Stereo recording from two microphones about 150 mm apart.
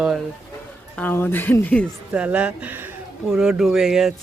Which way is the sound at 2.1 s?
10° right (ahead or behind).